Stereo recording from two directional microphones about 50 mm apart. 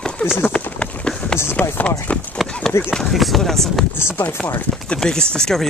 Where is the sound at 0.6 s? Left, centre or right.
Left.